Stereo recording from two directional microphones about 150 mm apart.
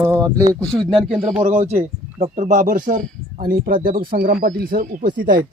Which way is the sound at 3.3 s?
75° right (ahead or behind).